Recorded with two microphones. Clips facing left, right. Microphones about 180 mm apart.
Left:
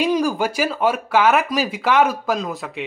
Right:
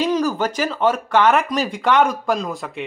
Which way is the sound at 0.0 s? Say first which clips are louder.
Even; 10° left (ahead or behind).